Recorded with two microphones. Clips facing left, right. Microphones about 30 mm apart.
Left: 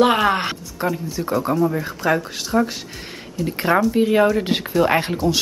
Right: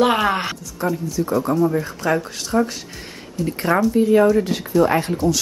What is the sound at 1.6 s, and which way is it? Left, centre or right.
Speech, centre.